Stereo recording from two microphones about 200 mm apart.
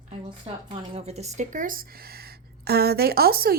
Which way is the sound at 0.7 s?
30° right (ahead or behind).